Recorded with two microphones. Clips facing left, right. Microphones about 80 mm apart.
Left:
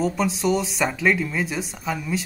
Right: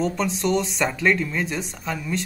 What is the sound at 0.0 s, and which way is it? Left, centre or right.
Speech, centre.